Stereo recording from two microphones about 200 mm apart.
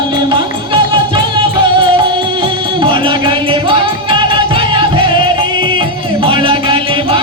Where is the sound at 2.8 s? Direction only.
25° right (ahead or behind).